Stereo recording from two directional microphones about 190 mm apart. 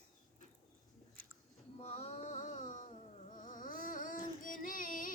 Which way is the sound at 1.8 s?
30° left (ahead or behind).